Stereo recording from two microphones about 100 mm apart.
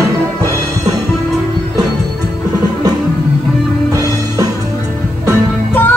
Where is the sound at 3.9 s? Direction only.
35° right (ahead or behind).